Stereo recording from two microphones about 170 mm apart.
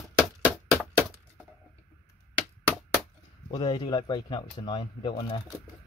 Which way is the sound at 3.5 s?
25° left (ahead or behind).